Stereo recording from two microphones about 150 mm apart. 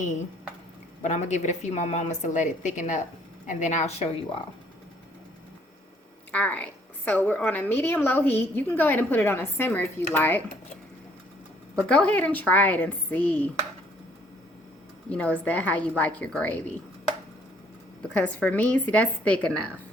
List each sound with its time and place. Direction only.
1.0 s a woman's voice: 55° left (ahead or behind)
6.3 s a woman's voice: 10° left (ahead or behind)
11.9 s a woman's voice: 10° left (ahead or behind)
15.1 s a woman's voice: 10° left (ahead or behind)
18.1 s a woman's voice: 10° left (ahead or behind)